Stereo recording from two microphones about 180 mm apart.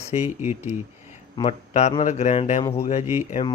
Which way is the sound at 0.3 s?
10° right (ahead or behind).